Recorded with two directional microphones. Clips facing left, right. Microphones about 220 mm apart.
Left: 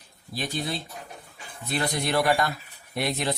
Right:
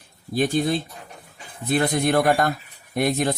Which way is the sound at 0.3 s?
50° right (ahead or behind).